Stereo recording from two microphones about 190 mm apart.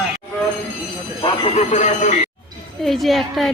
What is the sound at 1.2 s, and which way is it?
Speech, 35° left (ahead or behind).